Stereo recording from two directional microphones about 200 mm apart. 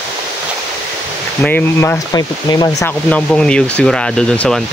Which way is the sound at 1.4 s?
10° left (ahead or behind).